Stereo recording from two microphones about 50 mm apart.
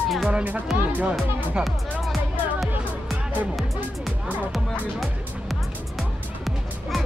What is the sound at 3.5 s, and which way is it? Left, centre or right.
Music, centre.